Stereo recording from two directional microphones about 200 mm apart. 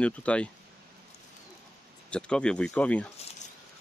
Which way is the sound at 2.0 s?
5° left (ahead or behind).